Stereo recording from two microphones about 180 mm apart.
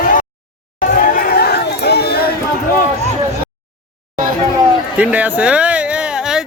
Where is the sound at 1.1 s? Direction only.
55° left (ahead or behind).